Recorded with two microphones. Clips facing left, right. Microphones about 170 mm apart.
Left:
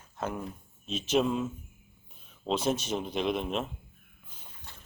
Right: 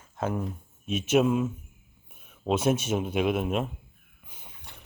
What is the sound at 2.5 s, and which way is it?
Speech, 10° right (ahead or behind).